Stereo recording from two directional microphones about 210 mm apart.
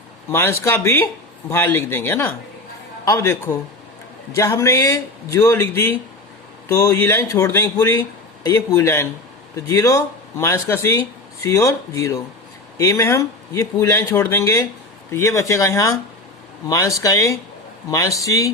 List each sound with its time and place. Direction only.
0.3 s speech: 10° left (ahead or behind)